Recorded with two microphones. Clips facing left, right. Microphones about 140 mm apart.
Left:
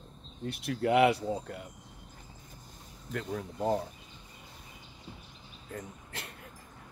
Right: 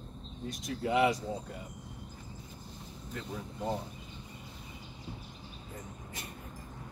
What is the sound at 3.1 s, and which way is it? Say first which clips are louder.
Speech: left 5 dB; 70° left (ahead or behind).